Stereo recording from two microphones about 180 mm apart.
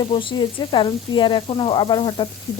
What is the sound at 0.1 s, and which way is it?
Sizzle, 30° left (ahead or behind).